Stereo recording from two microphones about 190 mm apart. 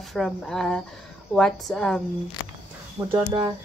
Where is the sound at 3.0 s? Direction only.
20° right (ahead or behind).